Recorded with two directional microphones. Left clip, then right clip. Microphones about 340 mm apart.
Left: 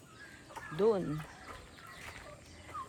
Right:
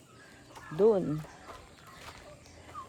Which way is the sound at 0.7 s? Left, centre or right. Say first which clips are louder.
Right 5 dB; right.